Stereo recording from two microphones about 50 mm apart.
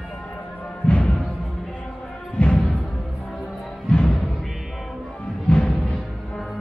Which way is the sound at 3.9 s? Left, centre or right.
Centre.